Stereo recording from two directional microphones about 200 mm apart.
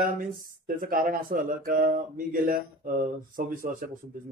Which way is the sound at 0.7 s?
45° right (ahead or behind).